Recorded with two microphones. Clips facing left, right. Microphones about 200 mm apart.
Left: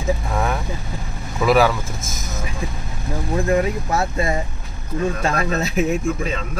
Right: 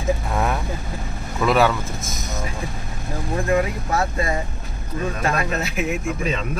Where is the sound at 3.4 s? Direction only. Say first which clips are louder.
Left 1 dB; 25° left (ahead or behind).